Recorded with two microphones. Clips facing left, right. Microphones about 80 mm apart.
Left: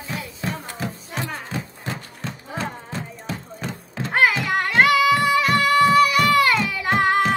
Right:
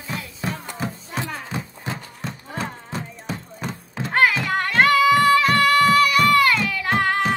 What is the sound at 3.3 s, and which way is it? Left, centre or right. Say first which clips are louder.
Music: right 1 dB; centre.